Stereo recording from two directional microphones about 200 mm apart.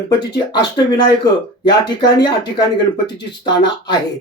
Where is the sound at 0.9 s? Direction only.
20° left (ahead or behind).